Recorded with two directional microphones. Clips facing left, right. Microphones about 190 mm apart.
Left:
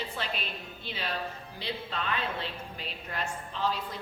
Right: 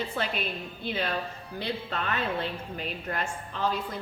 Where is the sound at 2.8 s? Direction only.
50° right (ahead or behind).